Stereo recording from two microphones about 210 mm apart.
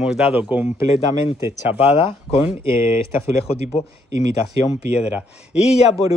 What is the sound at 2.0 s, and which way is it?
Speech, 25° left (ahead or behind).